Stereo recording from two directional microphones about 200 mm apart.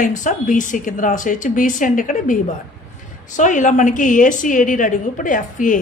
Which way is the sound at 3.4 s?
40° left (ahead or behind).